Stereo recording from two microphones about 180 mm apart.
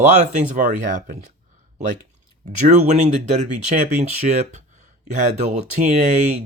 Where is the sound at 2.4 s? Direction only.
40° right (ahead or behind).